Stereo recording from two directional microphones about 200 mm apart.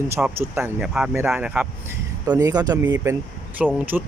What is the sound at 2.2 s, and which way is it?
Speech, 20° right (ahead or behind).